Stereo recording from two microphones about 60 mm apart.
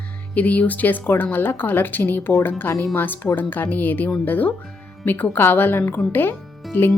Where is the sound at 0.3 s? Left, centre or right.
Left.